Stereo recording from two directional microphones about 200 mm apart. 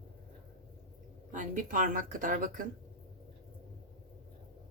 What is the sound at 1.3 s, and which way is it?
Speech, 40° right (ahead or behind).